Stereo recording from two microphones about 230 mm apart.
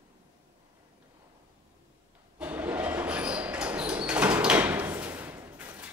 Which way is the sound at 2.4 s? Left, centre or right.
Centre.